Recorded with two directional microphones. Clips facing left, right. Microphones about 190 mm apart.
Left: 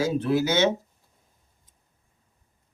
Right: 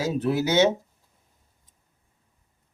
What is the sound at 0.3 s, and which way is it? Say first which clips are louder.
Speech: right 3 dB; 15° right (ahead or behind).